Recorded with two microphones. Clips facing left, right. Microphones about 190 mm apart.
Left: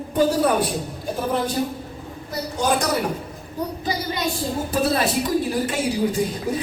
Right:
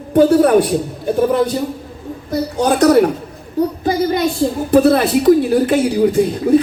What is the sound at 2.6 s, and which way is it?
Speech, 60° right (ahead or behind).